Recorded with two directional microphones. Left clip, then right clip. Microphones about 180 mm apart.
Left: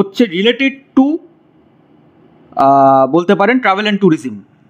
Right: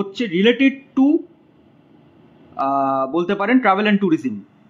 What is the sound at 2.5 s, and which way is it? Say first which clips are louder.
Speech: left 11 dB; 40° left (ahead or behind).